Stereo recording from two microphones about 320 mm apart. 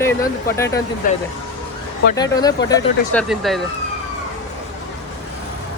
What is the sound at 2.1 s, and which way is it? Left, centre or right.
Speech, centre.